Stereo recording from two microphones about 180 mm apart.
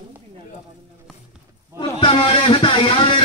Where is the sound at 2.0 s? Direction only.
30° left (ahead or behind).